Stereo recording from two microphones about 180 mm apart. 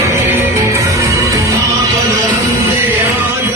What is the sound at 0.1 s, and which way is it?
Music, 15° right (ahead or behind).